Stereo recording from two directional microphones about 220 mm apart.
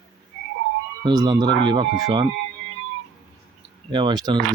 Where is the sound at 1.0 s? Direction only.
20° right (ahead or behind).